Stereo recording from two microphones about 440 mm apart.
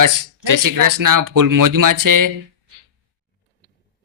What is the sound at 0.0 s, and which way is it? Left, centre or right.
Speech, right.